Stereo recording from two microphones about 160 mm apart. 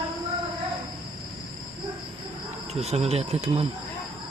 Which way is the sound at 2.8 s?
40° right (ahead or behind).